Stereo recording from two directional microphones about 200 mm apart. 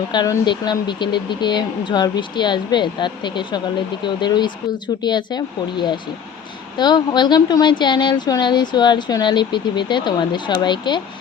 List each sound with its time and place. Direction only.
0.1 s speech: 20° left (ahead or behind)